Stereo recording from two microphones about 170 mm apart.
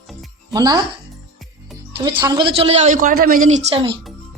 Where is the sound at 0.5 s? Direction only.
20° right (ahead or behind).